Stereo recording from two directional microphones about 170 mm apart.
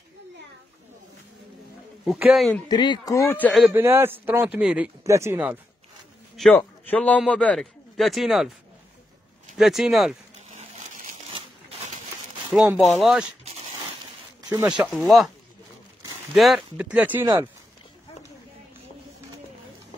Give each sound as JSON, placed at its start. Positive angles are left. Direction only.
{"t": 2.0, "sound": "speech", "side_deg": -5}
{"t": 2.7, "sound": "speech", "side_deg": 25}
{"t": 3.6, "sound": "a man's voice", "side_deg": -15}
{"t": 5.0, "sound": "a man's voice", "side_deg": -15}
{"t": 6.5, "sound": "a man's voice", "side_deg": 10}
{"t": 9.6, "sound": "speech", "side_deg": 0}
{"t": 12.7, "sound": "speech", "side_deg": 0}
{"t": 14.8, "sound": "speech", "side_deg": 0}
{"t": 16.3, "sound": "a man's voice", "side_deg": 0}